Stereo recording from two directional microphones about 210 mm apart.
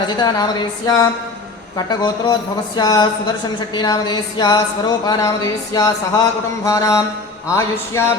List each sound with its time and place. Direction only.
0.2 s speech: 20° left (ahead or behind)